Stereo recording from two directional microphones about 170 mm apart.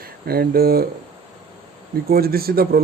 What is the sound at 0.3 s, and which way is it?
Speech, 65° right (ahead or behind).